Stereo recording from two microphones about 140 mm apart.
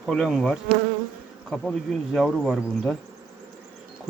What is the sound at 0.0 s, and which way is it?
Speech, centre (ahead or behind).